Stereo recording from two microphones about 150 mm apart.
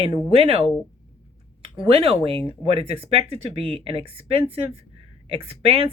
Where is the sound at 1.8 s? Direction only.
40° right (ahead or behind).